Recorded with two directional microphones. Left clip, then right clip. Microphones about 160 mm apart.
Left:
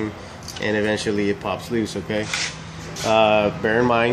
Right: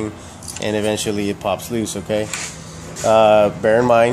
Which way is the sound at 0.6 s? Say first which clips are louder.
Right 2 dB; 45° right (ahead or behind).